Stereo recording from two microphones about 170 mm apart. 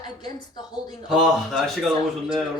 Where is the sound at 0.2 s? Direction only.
25° left (ahead or behind).